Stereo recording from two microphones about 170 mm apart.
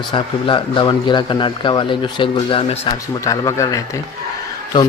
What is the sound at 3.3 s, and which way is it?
Speech, 20° left (ahead or behind).